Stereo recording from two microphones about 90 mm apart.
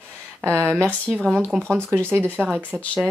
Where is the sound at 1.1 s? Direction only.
5° left (ahead or behind).